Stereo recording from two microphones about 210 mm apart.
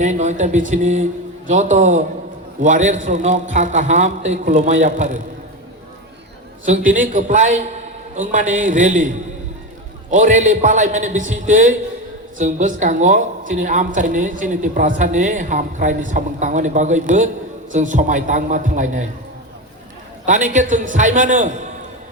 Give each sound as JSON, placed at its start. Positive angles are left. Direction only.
{"t": 0.0, "sound": "a woman's voice", "side_deg": -35}
{"t": 6.7, "sound": "a woman's voice", "side_deg": -35}
{"t": 20.2, "sound": "a woman's voice", "side_deg": -35}